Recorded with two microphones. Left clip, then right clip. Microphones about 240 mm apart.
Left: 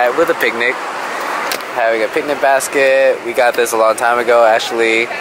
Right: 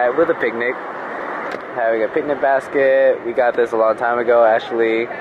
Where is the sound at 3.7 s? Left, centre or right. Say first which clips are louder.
Left 4 dB; right.